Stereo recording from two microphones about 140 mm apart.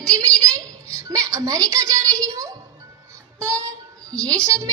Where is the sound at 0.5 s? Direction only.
20° right (ahead or behind).